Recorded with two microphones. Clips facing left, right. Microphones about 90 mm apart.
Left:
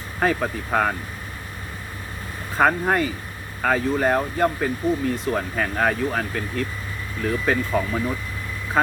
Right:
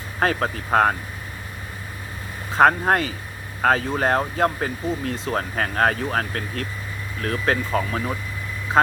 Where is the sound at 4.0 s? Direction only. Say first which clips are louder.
Even; 70° right (ahead or behind).